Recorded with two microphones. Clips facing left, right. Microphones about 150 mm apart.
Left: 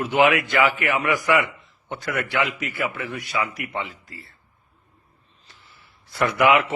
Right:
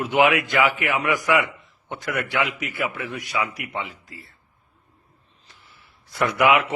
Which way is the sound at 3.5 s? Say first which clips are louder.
Left 1 dB; 15° right (ahead or behind).